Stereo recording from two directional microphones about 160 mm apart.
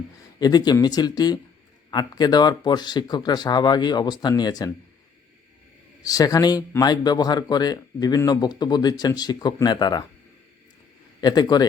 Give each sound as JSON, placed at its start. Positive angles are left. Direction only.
{"t": 0.3, "sound": "a man's voice", "side_deg": 25}
{"t": 6.0, "sound": "a man's voice", "side_deg": 25}
{"t": 11.2, "sound": "a man's voice", "side_deg": 25}